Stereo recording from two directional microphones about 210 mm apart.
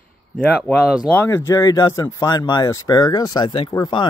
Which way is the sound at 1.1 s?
10° left (ahead or behind).